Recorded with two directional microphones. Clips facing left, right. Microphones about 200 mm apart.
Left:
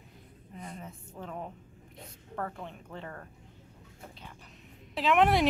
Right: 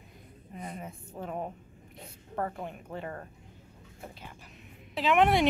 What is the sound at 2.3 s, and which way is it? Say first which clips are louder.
Speech: right 3 dB; 15° right (ahead or behind).